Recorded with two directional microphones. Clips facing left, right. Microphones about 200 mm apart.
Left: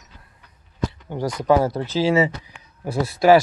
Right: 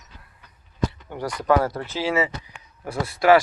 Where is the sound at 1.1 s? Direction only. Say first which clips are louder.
Left 3 dB; 20° left (ahead or behind).